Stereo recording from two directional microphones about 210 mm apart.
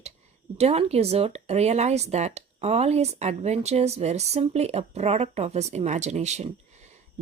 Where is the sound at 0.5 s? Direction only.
30° right (ahead or behind).